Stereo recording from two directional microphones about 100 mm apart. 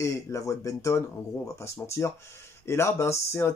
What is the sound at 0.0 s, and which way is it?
Speech, 30° left (ahead or behind).